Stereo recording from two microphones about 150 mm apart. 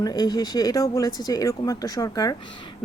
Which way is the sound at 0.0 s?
25° left (ahead or behind).